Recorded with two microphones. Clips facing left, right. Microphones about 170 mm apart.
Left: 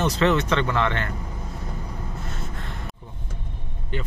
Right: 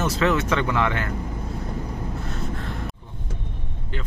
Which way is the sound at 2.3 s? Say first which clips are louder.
Right 5 dB; centre (ahead or behind).